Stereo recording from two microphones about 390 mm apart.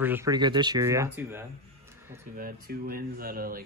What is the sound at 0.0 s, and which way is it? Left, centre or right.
Speech, centre.